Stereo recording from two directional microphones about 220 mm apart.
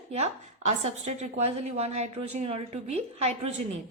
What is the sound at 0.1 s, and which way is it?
A woman's voice, 30° right (ahead or behind).